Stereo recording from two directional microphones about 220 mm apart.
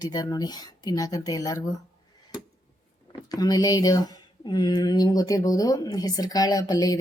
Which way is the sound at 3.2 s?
15° left (ahead or behind).